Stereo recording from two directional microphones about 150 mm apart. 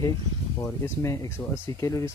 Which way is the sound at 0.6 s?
20° left (ahead or behind).